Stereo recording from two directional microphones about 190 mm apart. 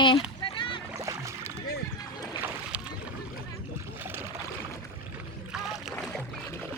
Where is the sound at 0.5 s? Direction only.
25° left (ahead or behind).